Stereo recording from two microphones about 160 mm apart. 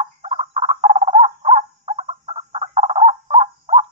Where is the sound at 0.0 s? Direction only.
40° right (ahead or behind).